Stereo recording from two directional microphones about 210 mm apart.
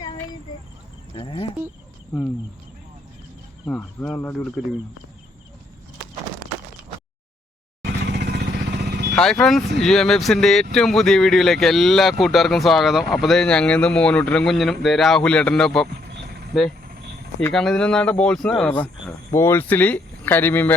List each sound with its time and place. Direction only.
1.1 s speech: 25° left (ahead or behind)
3.7 s speech: 5° left (ahead or behind)
8.0 s vehicle: 55° right (ahead or behind)
9.1 s speech: 5° left (ahead or behind)
16.0 s vehicle: 50° right (ahead or behind)
17.4 s speech: 5° left (ahead or behind)